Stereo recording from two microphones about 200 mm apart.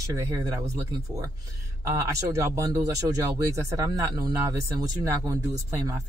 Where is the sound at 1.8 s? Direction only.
15° right (ahead or behind).